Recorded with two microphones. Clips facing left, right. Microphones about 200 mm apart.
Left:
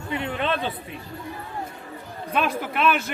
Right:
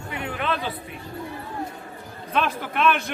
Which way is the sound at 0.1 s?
25° left (ahead or behind).